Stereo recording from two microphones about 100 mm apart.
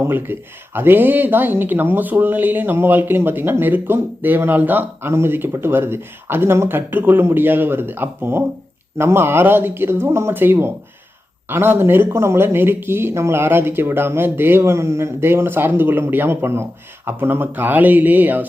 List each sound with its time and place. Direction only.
0.0 s speech: 20° right (ahead or behind)